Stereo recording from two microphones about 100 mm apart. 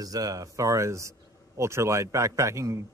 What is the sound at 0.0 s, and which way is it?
Speech, 40° right (ahead or behind).